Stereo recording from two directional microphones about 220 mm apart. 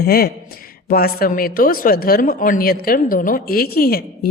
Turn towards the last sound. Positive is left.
turn(degrees=45)  # may be behind; listen again after turning